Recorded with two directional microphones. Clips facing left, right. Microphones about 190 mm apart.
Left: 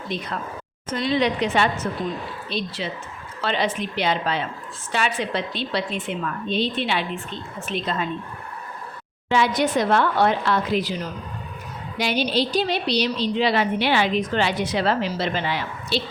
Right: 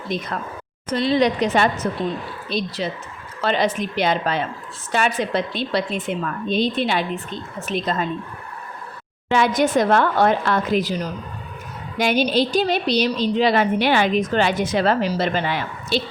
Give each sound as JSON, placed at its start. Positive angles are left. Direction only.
{"t": 0.1, "sound": "a woman's voice", "side_deg": -45}
{"t": 0.9, "sound": "a woman's voice", "side_deg": -35}
{"t": 9.3, "sound": "a woman's voice", "side_deg": -50}
{"t": 11.9, "sound": "a woman's voice", "side_deg": -50}